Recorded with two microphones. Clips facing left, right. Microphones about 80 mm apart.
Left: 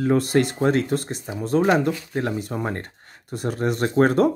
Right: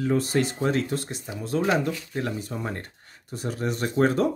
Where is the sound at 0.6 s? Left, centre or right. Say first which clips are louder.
Left 5 dB; left.